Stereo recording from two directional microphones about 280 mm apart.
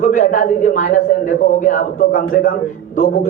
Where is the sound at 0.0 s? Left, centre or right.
Left.